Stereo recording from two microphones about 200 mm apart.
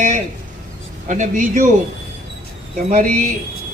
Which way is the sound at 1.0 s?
40° right (ahead or behind).